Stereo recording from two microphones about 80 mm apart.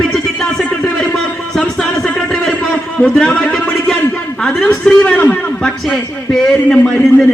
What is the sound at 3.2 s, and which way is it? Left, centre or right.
Speech, centre.